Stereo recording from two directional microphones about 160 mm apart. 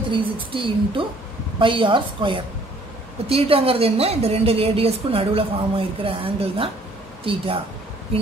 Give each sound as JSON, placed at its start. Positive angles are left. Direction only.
{"t": 0.1, "sound": "a woman's voice", "side_deg": -30}